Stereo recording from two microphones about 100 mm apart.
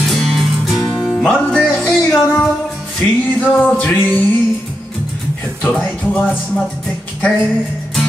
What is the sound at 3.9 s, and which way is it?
Speech, 15° left (ahead or behind).